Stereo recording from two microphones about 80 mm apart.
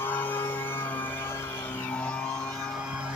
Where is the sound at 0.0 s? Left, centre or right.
Left.